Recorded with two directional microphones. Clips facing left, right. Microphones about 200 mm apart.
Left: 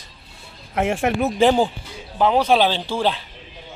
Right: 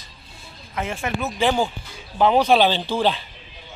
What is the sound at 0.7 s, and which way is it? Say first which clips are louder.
Speech: left 6 dB; 75° left (ahead or behind).